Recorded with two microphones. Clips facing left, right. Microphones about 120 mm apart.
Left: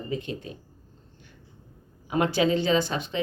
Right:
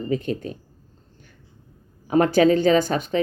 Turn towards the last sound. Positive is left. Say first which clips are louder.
# right 6 dB
turn(degrees=-45)  # may be behind; listen again after turning